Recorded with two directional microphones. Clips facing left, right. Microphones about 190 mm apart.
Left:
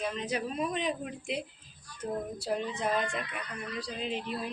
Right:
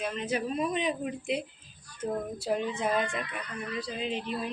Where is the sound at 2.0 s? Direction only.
20° right (ahead or behind).